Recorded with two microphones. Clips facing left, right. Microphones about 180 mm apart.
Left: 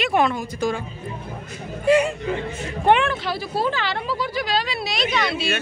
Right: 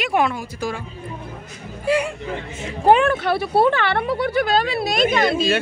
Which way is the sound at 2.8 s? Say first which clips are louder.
Right 3 dB; 35° right (ahead or behind).